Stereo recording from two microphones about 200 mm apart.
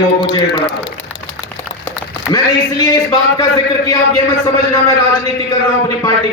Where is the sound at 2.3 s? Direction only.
20° left (ahead or behind).